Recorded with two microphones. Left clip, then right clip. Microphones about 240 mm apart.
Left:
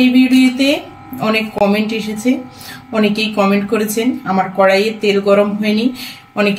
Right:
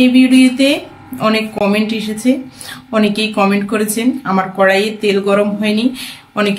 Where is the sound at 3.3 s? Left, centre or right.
Centre.